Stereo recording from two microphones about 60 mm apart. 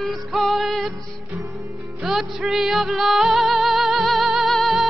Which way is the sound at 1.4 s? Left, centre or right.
Right.